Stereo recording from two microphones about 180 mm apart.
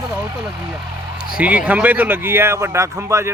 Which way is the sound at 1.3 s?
5° right (ahead or behind).